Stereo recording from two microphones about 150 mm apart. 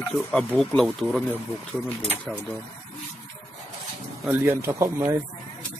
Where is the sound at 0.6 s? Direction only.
5° left (ahead or behind).